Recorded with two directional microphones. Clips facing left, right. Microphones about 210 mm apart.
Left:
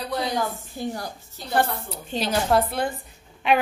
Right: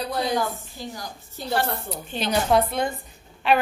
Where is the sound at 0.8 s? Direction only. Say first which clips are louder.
Left 6 dB; 60° left (ahead or behind).